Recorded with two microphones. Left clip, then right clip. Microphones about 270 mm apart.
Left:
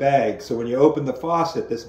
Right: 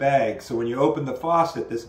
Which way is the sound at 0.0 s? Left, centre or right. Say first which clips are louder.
Left 2 dB; centre.